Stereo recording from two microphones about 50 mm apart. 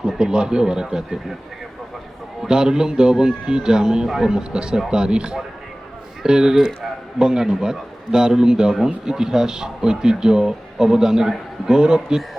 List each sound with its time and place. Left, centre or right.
0.0 s speech: centre
2.4 s speech: centre
12.0 s speech: centre